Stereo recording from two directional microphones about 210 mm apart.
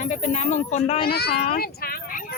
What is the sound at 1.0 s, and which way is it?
Speech, 50° left (ahead or behind).